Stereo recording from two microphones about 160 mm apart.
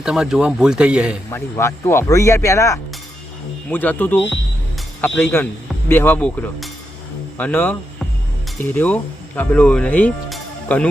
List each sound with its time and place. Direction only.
0.0 s speech: 5° right (ahead or behind)
1.3 s speech: 15° left (ahead or behind)